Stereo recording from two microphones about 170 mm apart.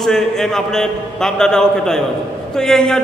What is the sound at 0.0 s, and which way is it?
A man's voice, 5° left (ahead or behind).